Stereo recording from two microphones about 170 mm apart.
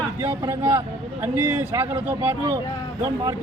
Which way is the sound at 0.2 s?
15° right (ahead or behind).